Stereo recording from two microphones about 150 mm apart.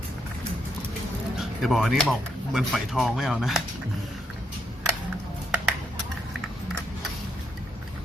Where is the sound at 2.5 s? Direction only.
Centre (ahead or behind).